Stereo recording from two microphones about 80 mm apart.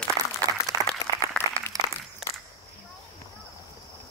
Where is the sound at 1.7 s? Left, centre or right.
Right.